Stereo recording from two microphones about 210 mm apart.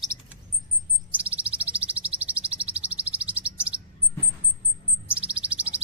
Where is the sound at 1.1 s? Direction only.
5° right (ahead or behind).